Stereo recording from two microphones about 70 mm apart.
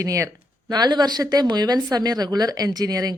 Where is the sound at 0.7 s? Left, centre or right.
Right.